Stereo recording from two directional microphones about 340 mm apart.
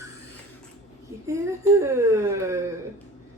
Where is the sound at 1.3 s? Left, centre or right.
Centre.